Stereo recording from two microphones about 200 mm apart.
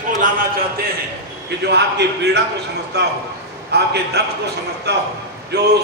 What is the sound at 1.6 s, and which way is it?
A man's voice, 55° right (ahead or behind).